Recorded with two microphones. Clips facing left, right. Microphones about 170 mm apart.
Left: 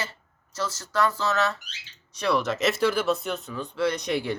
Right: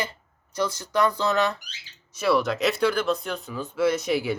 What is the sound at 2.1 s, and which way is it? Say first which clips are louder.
Speech: right 2 dB; 5° right (ahead or behind).